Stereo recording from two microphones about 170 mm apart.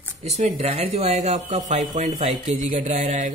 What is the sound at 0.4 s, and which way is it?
Speech, 35° right (ahead or behind).